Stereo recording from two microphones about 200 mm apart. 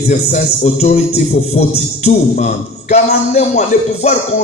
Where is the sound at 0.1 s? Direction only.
35° left (ahead or behind).